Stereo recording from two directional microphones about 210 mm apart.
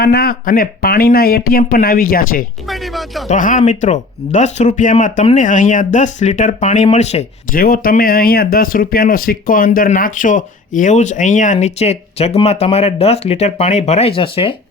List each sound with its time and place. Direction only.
0.0 s speech: 50° left (ahead or behind)
2.6 s speech: centre (ahead or behind)
3.2 s speech: 35° left (ahead or behind)
7.9 s speech: 45° left (ahead or behind); by 14.5 s 25° left (ahead or behind)